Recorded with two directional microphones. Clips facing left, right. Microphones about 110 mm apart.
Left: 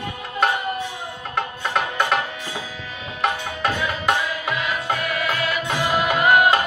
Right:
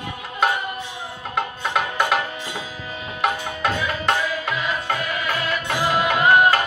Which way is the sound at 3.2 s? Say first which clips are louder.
Even; 5° left (ahead or behind).